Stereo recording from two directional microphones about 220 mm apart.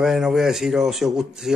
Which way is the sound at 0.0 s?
Centre (ahead or behind).